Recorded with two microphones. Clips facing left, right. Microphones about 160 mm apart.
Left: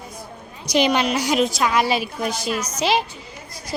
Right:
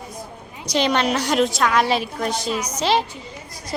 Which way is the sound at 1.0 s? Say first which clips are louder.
Even; centre (ahead or behind).